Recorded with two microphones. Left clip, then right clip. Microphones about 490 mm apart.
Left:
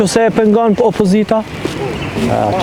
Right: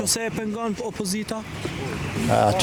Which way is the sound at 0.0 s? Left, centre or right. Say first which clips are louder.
Left 16 dB; left.